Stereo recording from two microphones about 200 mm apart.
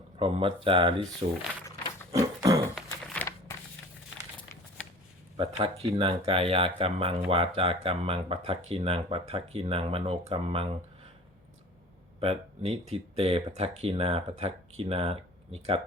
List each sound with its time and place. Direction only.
0.2 s speech: 25° right (ahead or behind)
2.1 s a sound: 15° right (ahead or behind)
2.7 s a sound: 5° left (ahead or behind)
3.2 s crumpling: 15° left (ahead or behind)
5.4 s speech: 30° right (ahead or behind)
12.2 s speech: 30° right (ahead or behind)